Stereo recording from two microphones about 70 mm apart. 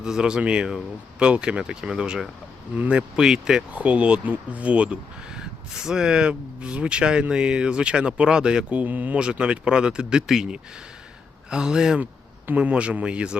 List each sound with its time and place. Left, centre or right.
0.0 s speech: centre
3.2 s speech: centre